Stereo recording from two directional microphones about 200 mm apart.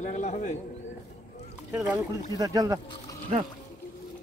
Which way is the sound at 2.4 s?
15° right (ahead or behind).